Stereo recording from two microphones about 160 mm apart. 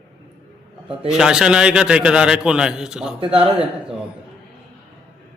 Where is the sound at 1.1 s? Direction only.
5° right (ahead or behind).